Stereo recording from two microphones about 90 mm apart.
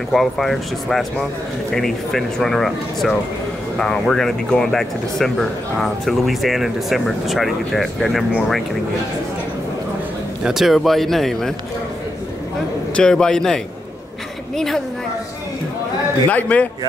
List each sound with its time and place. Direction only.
0.1 s speech: centre (ahead or behind)
10.4 s speech: 5° right (ahead or behind)
12.9 s a man's voice: 10° left (ahead or behind)
16.3 s a man's voice: 15° left (ahead or behind)